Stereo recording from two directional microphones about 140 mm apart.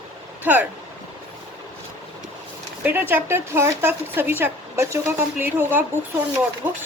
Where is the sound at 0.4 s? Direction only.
10° right (ahead or behind).